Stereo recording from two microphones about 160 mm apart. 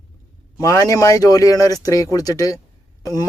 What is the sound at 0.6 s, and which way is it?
Speech, 20° left (ahead or behind).